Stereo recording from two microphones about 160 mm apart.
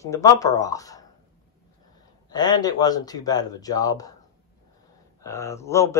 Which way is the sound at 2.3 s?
25° left (ahead or behind).